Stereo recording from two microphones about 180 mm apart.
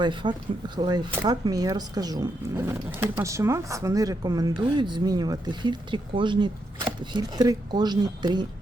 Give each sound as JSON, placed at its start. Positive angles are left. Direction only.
{"t": 0.0, "sound": "speech", "side_deg": -25}